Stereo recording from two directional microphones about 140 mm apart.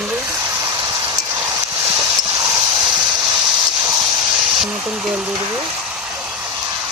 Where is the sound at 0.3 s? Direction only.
20° right (ahead or behind).